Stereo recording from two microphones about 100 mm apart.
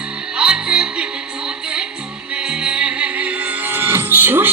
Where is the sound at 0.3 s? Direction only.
10° right (ahead or behind).